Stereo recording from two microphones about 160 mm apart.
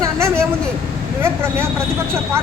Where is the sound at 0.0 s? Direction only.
15° right (ahead or behind).